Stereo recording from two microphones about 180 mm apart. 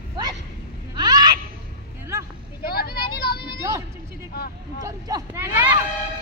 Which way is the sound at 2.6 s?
60° left (ahead or behind).